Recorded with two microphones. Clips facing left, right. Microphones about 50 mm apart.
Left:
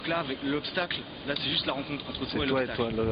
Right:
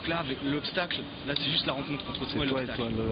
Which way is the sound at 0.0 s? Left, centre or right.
Centre.